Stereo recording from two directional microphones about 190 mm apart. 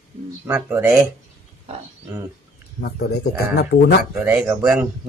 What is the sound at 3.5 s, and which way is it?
Speech, 60° left (ahead or behind).